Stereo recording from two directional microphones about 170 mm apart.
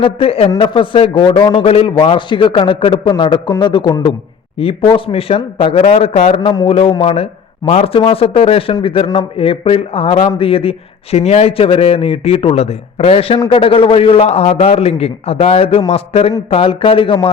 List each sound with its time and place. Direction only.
0.0 s a man's voice: 35° left (ahead or behind)